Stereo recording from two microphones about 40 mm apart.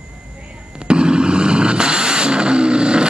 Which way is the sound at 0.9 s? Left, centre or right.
Right.